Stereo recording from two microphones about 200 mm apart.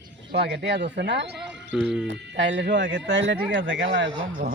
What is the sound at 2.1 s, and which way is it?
Speech, 60° right (ahead or behind).